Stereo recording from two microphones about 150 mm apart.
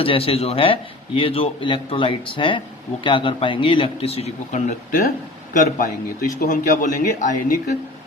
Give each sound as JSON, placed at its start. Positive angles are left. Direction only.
{"t": 0.0, "sound": "speech", "side_deg": 40}
{"t": 4.9, "sound": "a man's voice", "side_deg": 70}